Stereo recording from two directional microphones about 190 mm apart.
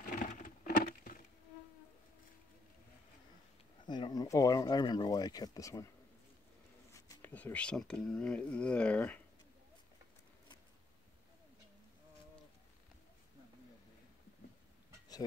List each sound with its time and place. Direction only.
0.0 s a sound: 45° left (ahead or behind)
3.8 s speech: 25° left (ahead or behind)
6.9 s speech: 10° left (ahead or behind)